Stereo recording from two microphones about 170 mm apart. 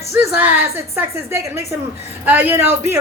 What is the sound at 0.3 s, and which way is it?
Speech, 10° right (ahead or behind).